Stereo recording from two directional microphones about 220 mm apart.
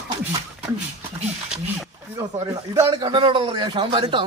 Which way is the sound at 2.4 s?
15° right (ahead or behind).